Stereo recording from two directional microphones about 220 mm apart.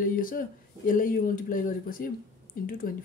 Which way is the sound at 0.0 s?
40° left (ahead or behind).